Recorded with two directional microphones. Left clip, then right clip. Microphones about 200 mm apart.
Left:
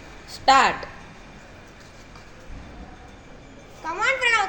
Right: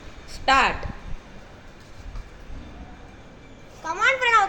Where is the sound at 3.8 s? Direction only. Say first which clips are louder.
Right 1 dB; 15° right (ahead or behind).